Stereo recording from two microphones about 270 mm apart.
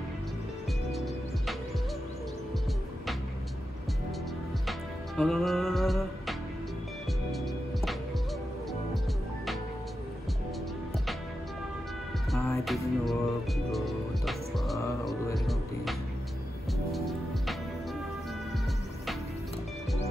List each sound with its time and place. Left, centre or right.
0.9 s music: centre
4.6 s music: centre
7.3 s music: centre
12.3 s music: centre